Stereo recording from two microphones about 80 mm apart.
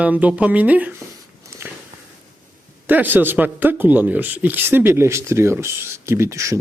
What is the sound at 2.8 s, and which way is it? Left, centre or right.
A man's voice, right.